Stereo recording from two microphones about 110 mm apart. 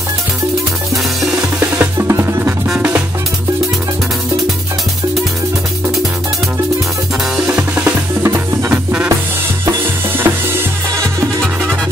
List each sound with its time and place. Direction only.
1.6 s drum: 20° right (ahead or behind)
7.3 s drum: 10° right (ahead or behind)
8.6 s music: 10° right (ahead or behind)
9.7 s drum: 20° right (ahead or behind)